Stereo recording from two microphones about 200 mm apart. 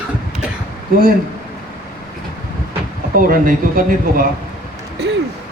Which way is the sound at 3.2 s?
45° right (ahead or behind).